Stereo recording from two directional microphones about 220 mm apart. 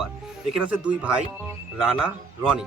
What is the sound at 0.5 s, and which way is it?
Speech, 5° right (ahead or behind).